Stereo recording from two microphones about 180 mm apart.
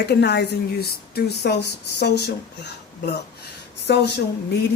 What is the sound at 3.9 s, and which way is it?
Speech, 70° left (ahead or behind).